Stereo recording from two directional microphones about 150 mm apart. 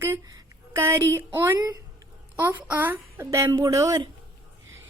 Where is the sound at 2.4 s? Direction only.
10° right (ahead or behind).